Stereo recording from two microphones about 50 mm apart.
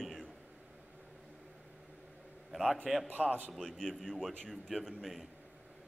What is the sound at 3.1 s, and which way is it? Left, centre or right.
Speech, right.